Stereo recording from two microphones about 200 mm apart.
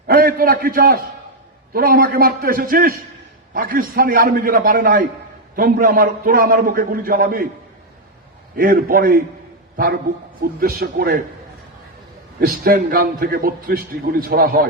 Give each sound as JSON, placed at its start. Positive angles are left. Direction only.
{"t": 0.1, "sound": "a man's voice", "side_deg": -45}
{"t": 8.5, "sound": "a man's voice", "side_deg": -45}
{"t": 10.4, "sound": "a man's voice", "side_deg": -50}
{"t": 12.4, "sound": "a man's voice", "side_deg": -45}